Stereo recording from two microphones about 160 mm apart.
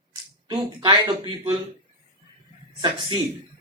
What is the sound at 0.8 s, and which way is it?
Speech, 30° right (ahead or behind).